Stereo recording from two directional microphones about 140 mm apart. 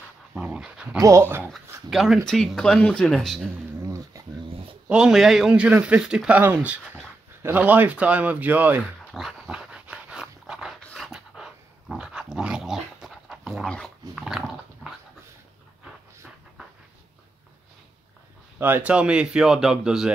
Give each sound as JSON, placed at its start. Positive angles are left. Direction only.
{"t": 0.3, "sound": "dog", "side_deg": -5}
{"t": 0.9, "sound": "speech", "side_deg": -20}
{"t": 1.9, "sound": "speech", "side_deg": 0}
{"t": 3.8, "sound": "dog", "side_deg": -25}
{"t": 4.8, "sound": "a man's voice", "side_deg": -5}
{"t": 9.1, "sound": "dog", "side_deg": -5}
{"t": 18.6, "sound": "speech", "side_deg": -10}